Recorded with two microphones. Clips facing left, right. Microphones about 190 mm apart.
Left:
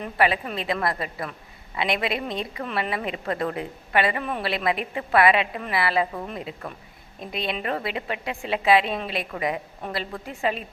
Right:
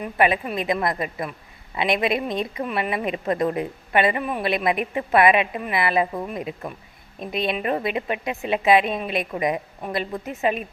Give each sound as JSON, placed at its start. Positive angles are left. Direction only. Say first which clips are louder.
{"t": 0.0, "sound": "a woman's voice", "louder": "right 2 dB", "side_deg": -15}